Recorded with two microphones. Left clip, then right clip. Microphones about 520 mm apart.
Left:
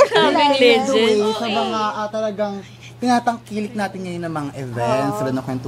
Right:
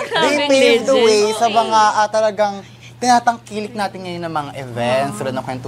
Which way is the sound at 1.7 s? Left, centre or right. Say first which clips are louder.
Right 9 dB; right.